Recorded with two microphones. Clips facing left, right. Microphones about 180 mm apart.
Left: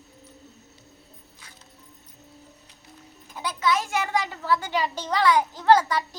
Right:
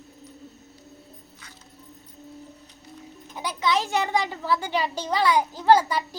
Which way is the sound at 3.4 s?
20° right (ahead or behind).